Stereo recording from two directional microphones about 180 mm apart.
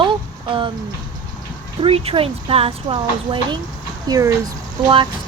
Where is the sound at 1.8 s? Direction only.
30° right (ahead or behind).